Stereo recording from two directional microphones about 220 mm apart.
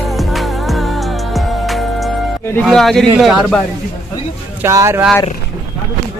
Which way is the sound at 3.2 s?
Centre (ahead or behind).